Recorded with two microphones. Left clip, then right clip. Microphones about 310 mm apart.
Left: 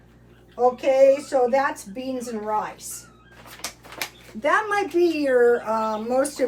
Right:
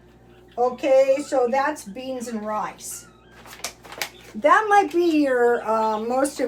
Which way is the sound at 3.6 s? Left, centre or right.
Centre.